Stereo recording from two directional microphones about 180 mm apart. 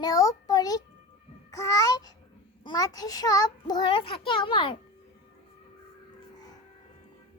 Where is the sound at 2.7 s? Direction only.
20° left (ahead or behind).